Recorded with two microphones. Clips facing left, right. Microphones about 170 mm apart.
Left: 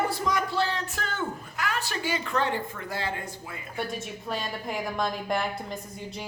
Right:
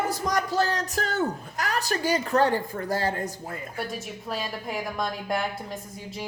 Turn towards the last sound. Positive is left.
turn(degrees=0)  # may be behind; listen again after turning